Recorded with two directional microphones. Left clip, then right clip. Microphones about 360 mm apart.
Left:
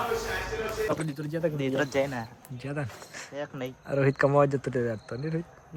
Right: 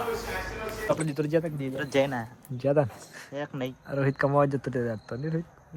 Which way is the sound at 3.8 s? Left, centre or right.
Centre.